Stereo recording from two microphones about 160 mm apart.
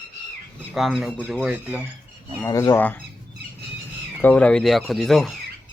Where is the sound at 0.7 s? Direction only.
Centre (ahead or behind).